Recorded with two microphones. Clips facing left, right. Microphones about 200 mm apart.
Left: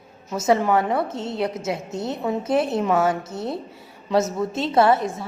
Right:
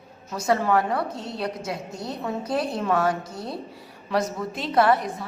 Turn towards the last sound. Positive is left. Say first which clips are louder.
# left 2 dB
turn(degrees=25)  # may be behind; listen again after turning